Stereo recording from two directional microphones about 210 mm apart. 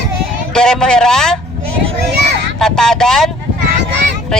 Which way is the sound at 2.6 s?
5° left (ahead or behind).